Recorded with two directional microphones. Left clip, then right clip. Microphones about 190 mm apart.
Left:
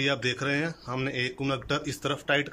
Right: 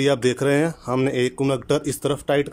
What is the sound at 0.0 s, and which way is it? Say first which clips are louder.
Speech: right 8 dB; 35° right (ahead or behind).